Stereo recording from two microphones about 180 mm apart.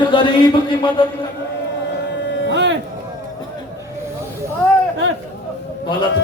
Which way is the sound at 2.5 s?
75° right (ahead or behind).